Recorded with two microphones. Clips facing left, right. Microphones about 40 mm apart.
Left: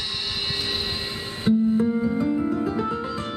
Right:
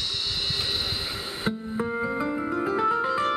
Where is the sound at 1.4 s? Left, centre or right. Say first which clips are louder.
Left 10 dB; centre.